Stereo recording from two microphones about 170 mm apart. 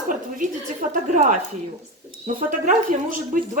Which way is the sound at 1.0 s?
45° right (ahead or behind).